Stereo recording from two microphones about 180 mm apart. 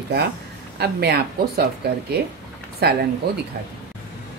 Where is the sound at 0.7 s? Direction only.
65° right (ahead or behind).